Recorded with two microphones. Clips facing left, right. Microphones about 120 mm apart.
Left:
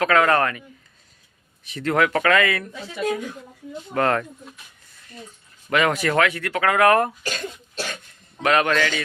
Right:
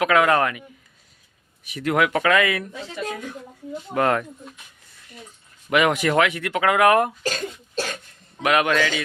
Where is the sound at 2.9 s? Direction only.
10° left (ahead or behind).